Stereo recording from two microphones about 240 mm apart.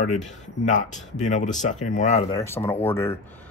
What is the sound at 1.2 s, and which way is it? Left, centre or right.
Speech, left.